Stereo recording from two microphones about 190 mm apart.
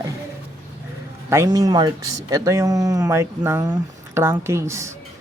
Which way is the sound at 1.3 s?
15° right (ahead or behind).